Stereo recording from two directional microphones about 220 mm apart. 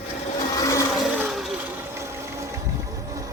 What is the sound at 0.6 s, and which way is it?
Blender, 15° left (ahead or behind).